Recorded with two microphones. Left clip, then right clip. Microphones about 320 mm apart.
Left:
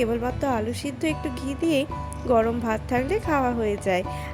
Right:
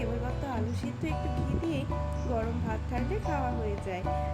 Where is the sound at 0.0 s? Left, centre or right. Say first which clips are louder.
Left 11 dB; left.